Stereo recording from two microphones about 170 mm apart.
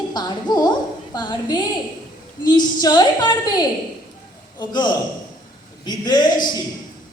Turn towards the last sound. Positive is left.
turn(degrees=25)  # may be behind; listen again after turning